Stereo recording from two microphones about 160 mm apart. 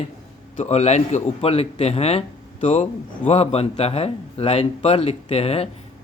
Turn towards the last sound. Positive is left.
turn(degrees=40)  # may be behind; listen again after turning